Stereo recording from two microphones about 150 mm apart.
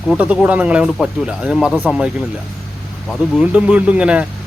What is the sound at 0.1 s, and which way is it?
Speech, 5° right (ahead or behind).